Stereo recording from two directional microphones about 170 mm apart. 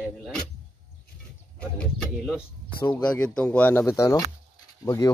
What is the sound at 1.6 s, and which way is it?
Speech, 5° left (ahead or behind).